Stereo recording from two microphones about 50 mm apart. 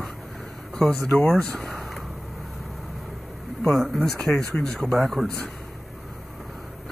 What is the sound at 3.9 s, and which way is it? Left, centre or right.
A man's voice, centre.